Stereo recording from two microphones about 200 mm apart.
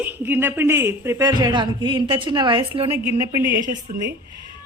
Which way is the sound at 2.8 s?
10° right (ahead or behind).